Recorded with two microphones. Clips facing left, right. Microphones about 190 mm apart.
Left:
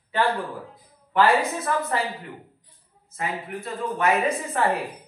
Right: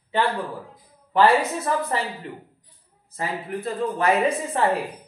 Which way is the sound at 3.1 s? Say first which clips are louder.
Right 2 dB; 30° right (ahead or behind).